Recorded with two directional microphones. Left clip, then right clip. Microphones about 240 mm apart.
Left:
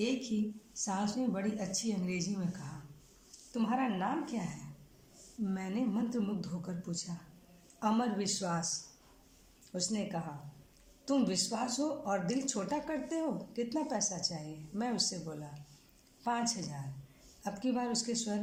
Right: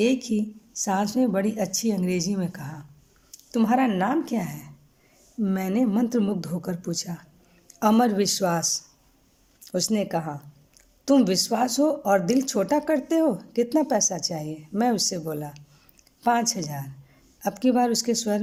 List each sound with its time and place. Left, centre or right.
0.0 s speech: right
3.5 s speech: right